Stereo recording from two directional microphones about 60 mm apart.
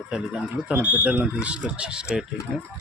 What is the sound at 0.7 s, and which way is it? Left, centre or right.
Speech, right.